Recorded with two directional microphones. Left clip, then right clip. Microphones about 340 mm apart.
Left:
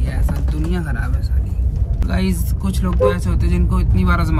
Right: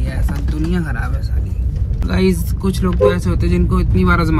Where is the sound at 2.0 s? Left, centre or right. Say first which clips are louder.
Right 7 dB; centre.